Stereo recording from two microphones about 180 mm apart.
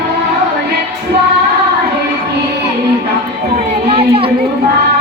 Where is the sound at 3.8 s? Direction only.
30° right (ahead or behind).